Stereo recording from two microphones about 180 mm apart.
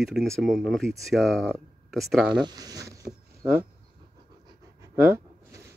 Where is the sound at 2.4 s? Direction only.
20° right (ahead or behind).